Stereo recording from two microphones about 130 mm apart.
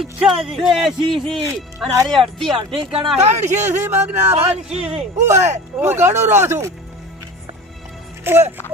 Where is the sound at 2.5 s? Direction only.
40° right (ahead or behind).